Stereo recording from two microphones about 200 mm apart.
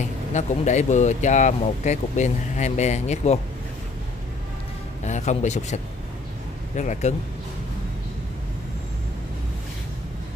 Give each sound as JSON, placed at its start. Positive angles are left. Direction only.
{"t": 0.0, "sound": "speech", "side_deg": 35}
{"t": 5.0, "sound": "speech", "side_deg": 35}